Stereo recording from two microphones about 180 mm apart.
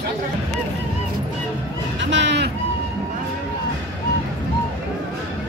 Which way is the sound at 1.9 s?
85° right.